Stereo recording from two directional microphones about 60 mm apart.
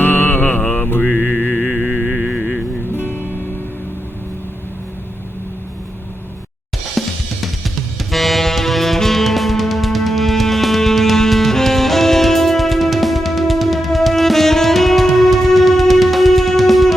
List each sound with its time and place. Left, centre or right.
0.0 s mantra: left
2.0 s music: centre
7.0 s drum kit: centre
7.4 s saxophone: centre